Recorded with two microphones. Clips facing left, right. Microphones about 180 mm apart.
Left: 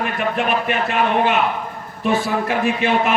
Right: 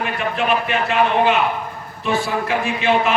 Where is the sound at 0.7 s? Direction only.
50° left (ahead or behind).